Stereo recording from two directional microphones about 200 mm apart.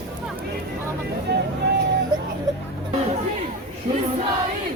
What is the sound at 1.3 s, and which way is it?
Speech, 55° right (ahead or behind).